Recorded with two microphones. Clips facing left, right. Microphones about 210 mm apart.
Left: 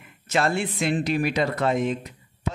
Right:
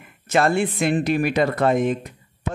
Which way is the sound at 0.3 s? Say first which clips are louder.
Right 5 dB; 50° right (ahead or behind).